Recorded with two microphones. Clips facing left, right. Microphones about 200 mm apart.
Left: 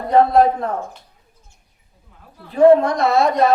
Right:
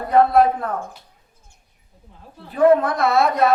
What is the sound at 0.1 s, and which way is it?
Speech, 30° left (ahead or behind).